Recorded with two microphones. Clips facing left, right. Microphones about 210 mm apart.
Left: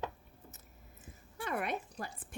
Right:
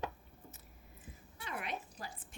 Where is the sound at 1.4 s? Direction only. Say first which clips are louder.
Left 6 dB; 50° left (ahead or behind).